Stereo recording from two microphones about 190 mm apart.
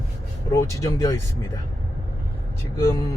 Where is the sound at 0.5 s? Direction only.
15° left (ahead or behind).